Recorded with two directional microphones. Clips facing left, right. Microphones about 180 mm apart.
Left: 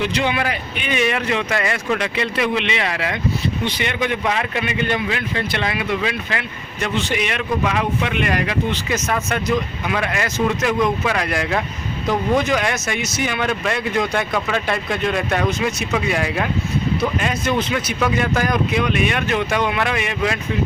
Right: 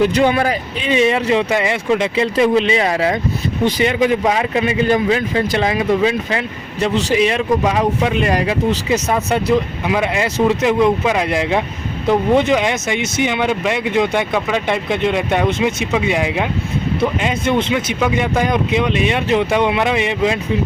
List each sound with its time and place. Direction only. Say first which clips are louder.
0.0 s speech: right 7 dB; 40° right (ahead or behind); by 20.4 s 25° right (ahead or behind)